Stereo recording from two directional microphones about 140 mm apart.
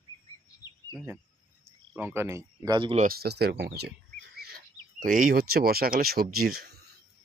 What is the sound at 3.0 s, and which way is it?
Speech, 90° right.